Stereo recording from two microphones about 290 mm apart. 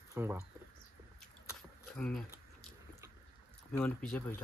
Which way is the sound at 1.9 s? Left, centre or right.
Centre.